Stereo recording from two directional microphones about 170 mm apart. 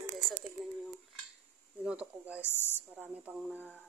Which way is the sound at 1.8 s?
5° right (ahead or behind).